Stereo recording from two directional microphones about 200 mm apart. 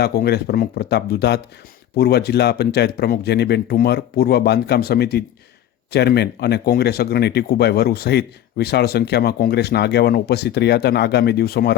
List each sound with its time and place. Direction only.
0.0 s speech: 50° left (ahead or behind)